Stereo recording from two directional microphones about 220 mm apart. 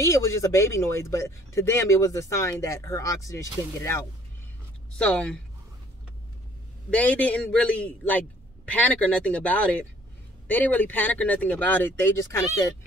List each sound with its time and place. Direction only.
0.0 s speech: 15° left (ahead or behind)
4.9 s speech: 5° left (ahead or behind)
6.9 s speech: 5° left (ahead or behind)